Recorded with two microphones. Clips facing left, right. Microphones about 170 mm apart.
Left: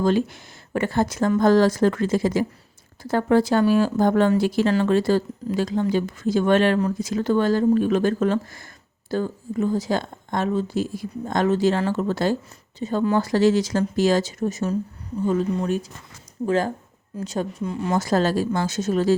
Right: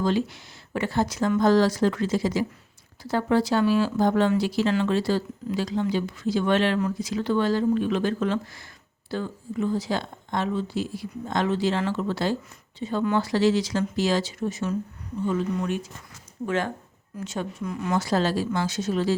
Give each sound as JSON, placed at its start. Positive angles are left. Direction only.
{"t": 0.0, "sound": "speech", "side_deg": 50}
{"t": 17.9, "sound": "speech", "side_deg": 45}